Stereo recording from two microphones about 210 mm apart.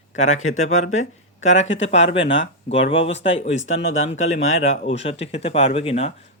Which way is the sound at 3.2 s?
60° left (ahead or behind).